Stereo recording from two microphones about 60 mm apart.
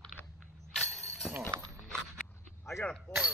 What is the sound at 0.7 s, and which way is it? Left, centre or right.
Music, centre.